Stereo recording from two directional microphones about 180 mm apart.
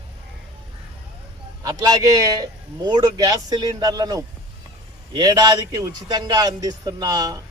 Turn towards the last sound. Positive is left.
turn(degrees=-20)  # may be behind; listen again after turning